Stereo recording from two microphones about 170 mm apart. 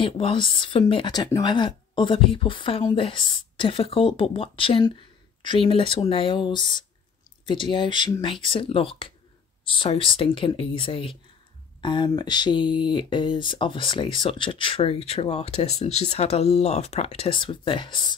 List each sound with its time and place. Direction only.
0.0 s speech: 30° left (ahead or behind)